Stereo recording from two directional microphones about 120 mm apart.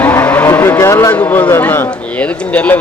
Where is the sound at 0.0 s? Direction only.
15° left (ahead or behind).